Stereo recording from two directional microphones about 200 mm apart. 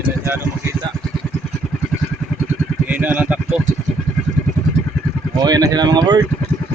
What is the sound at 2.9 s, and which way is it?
Speech, 10° right (ahead or behind).